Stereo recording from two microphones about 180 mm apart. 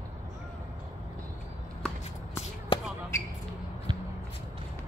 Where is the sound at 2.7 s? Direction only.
30° left (ahead or behind).